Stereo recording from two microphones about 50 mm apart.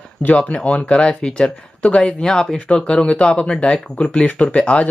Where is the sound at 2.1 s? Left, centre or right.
Centre.